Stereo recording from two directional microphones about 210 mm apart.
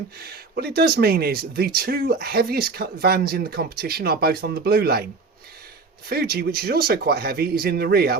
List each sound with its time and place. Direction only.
0.2 s speech: 50° right (ahead or behind)
6.1 s speech: 45° right (ahead or behind)